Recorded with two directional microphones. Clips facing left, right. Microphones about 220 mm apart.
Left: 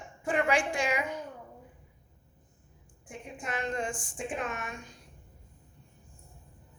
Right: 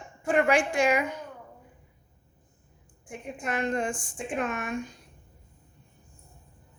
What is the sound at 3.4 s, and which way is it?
A woman's voice, 60° right (ahead or behind).